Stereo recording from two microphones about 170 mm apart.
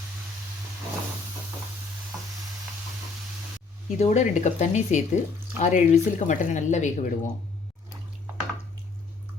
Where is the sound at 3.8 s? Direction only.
45° left (ahead or behind).